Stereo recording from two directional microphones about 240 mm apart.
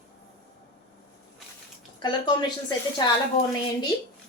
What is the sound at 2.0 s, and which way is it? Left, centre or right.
Speech, centre.